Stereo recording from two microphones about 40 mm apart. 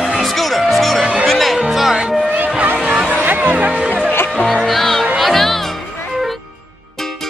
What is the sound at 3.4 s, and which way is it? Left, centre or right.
Music, right.